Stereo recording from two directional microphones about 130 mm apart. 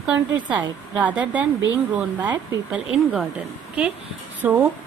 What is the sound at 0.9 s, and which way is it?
Speech, 10° right (ahead or behind).